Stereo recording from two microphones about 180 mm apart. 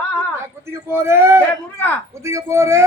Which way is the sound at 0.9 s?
15° right (ahead or behind).